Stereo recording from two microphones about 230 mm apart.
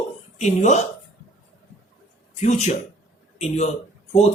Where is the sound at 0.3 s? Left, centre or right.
Left.